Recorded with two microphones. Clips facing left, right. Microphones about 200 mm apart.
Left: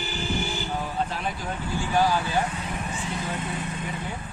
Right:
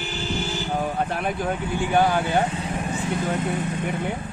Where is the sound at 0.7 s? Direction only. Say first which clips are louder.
Right 6 dB; 55° right (ahead or behind).